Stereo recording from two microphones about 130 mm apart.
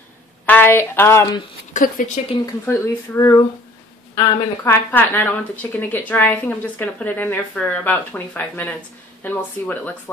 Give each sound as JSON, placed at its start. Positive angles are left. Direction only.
{"t": 0.5, "sound": "speech", "side_deg": 15}
{"t": 1.7, "sound": "speech", "side_deg": 80}
{"t": 2.6, "sound": "speech", "side_deg": 20}
{"t": 4.9, "sound": "speech", "side_deg": 15}